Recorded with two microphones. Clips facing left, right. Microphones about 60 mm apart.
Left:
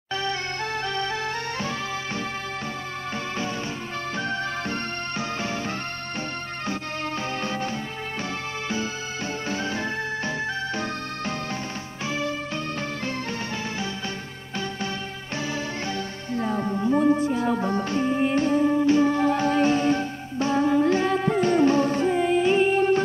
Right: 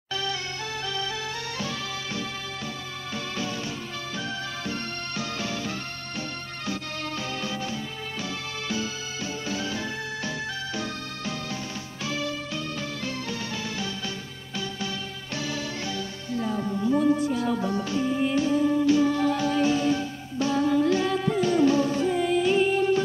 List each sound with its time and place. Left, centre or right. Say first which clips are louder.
0.1 s music: left 3 dB; left
4.2 s music: left 5 dB; left
7.4 s music: left 3 dB; left
9.5 s music: left 3 dB; left
16.3 s music: left 2 dB; left